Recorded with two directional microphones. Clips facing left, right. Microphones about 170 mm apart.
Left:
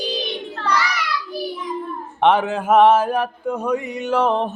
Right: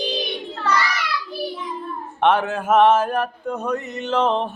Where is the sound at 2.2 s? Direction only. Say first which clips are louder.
Left 2 dB; 15° left (ahead or behind).